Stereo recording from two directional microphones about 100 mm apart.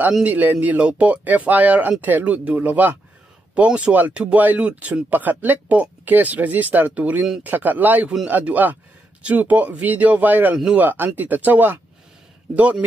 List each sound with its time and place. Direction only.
0.2 s speech: 15° right (ahead or behind)